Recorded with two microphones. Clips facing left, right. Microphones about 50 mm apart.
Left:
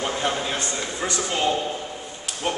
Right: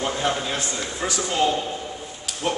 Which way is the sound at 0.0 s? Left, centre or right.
Centre.